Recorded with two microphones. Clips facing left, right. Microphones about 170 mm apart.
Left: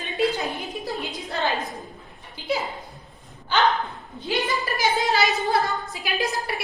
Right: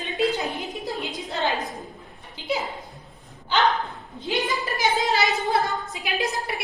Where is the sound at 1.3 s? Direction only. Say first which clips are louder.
Even; 20° right (ahead or behind).